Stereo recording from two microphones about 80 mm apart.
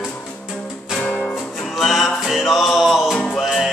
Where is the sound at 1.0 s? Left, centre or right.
Centre.